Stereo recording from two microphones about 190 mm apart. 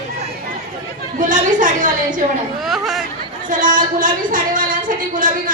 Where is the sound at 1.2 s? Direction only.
45° right (ahead or behind).